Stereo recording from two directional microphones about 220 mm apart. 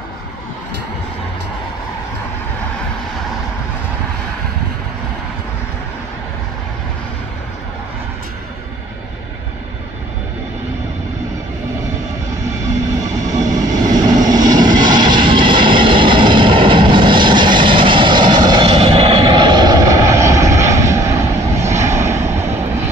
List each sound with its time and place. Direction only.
13.3 s vehicle: 15° right (ahead or behind)